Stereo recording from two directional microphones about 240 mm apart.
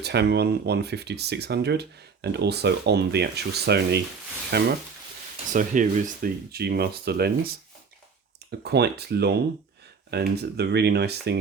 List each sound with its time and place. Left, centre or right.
0.0 s speech: right